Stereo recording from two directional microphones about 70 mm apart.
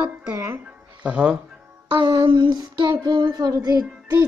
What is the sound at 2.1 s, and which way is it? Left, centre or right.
Child singing, right.